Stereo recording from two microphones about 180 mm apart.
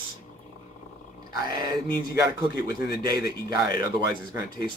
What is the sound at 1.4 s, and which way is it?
Speech, 25° right (ahead or behind).